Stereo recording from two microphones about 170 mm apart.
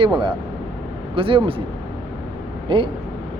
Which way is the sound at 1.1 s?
30° right (ahead or behind).